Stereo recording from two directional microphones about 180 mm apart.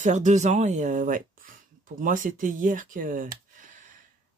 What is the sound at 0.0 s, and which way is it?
Speech, 40° right (ahead or behind).